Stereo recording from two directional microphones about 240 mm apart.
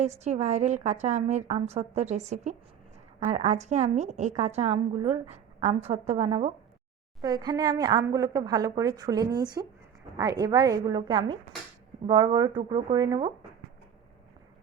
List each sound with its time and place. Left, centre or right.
0.0 s a woman's voice: right